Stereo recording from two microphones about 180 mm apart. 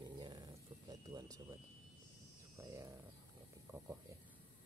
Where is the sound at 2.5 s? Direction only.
15° right (ahead or behind).